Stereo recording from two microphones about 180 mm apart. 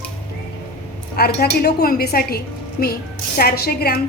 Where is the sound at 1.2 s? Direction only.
60° left (ahead or behind).